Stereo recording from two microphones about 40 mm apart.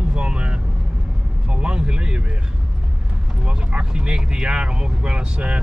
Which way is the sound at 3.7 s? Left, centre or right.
Right.